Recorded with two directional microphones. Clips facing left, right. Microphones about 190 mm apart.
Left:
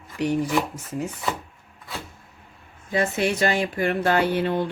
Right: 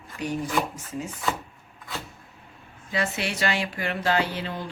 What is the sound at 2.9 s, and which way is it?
Speech, 45° left (ahead or behind).